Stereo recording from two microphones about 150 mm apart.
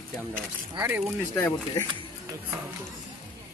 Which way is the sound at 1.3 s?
15° left (ahead or behind).